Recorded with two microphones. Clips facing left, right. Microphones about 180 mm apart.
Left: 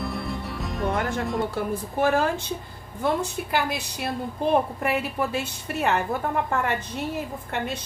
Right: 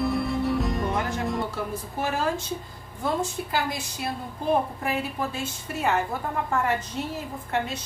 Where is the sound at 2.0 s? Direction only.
60° left (ahead or behind).